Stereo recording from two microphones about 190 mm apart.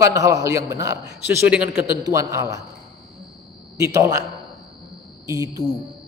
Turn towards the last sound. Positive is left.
turn(degrees=-15)  # may be behind; listen again after turning